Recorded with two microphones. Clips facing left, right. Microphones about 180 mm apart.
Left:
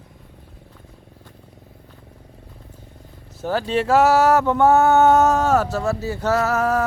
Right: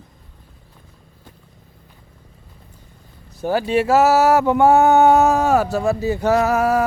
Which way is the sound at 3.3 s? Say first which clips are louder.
Right 3 dB; 10° right (ahead or behind).